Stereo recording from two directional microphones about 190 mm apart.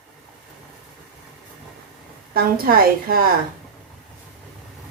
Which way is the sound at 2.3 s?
50° right (ahead or behind).